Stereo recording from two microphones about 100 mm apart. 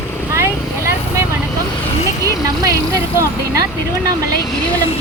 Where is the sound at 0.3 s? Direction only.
25° right (ahead or behind).